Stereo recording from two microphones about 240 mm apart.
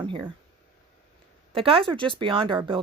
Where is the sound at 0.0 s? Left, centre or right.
Centre.